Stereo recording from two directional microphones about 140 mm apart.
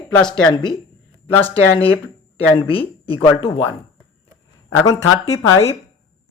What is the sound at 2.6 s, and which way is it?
Speech, 40° left (ahead or behind).